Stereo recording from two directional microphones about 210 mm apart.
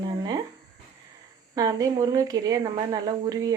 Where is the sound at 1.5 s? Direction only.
15° right (ahead or behind).